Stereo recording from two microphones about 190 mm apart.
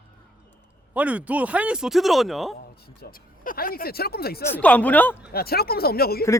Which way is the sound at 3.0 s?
50° left (ahead or behind).